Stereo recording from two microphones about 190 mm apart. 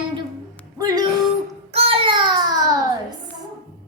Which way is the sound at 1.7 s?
30° right (ahead or behind).